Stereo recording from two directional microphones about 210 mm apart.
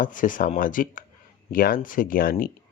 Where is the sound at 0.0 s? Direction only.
40° left (ahead or behind).